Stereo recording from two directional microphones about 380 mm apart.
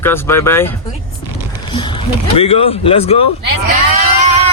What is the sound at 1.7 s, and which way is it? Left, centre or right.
Speech, centre.